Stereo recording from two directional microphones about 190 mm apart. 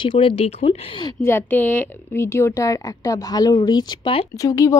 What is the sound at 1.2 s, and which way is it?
Speech, 10° left (ahead or behind).